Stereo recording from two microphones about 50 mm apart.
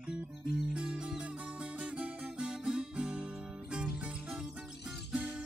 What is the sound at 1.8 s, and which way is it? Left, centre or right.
Guitar, centre.